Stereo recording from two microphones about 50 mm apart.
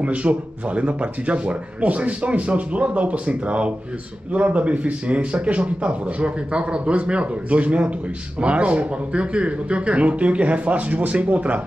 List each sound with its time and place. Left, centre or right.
0.0 s speech: right